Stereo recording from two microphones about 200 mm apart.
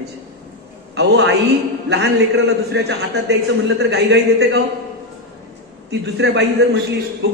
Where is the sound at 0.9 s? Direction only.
60° right (ahead or behind).